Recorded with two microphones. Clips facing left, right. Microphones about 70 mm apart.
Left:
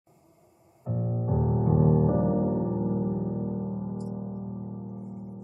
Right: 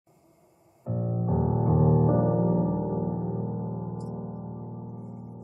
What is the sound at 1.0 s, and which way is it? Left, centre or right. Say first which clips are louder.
Music: right 1 dB; right.